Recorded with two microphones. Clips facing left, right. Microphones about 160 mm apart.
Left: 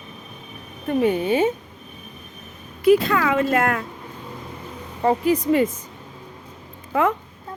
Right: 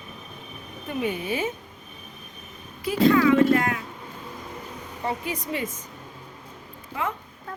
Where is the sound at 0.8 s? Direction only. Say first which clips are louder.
Left 8 dB; 35° left (ahead or behind).